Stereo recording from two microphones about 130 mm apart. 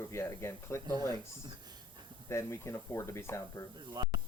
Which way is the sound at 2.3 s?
20° left (ahead or behind).